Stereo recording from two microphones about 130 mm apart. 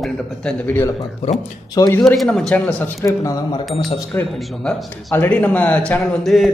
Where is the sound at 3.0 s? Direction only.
25° left (ahead or behind).